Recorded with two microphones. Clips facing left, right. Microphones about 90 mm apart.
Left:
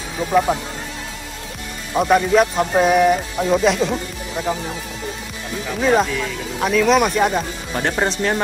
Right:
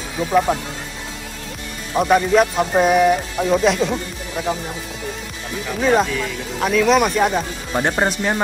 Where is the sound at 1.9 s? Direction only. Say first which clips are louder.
Even; centre (ahead or behind).